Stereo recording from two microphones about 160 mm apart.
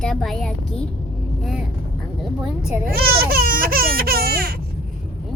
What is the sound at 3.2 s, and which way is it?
Baby cry, 70° right (ahead or behind).